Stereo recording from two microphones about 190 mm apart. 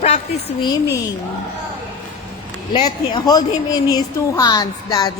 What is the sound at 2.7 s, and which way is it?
Speech, 25° left (ahead or behind).